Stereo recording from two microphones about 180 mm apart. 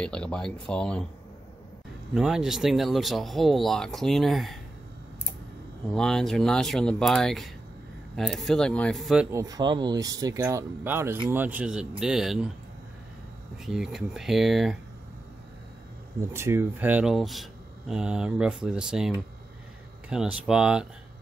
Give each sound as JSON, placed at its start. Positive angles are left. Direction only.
{"t": 0.0, "sound": "speech", "side_deg": 5}
{"t": 2.1, "sound": "speech", "side_deg": -5}
{"t": 5.9, "sound": "speech", "side_deg": 5}
{"t": 9.3, "sound": "speech", "side_deg": -20}
{"t": 13.7, "sound": "speech", "side_deg": 0}
{"t": 16.2, "sound": "speech", "side_deg": -15}